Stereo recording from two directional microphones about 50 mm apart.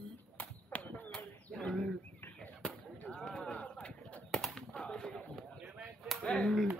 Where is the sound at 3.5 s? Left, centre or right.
Left.